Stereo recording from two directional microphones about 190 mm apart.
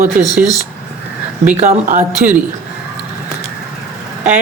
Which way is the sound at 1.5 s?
35° right (ahead or behind).